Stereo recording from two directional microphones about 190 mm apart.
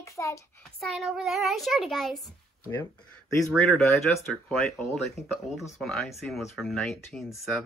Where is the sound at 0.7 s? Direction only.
Centre (ahead or behind).